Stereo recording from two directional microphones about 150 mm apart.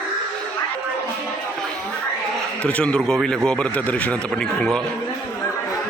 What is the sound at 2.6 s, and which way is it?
A man's voice, 5° left (ahead or behind).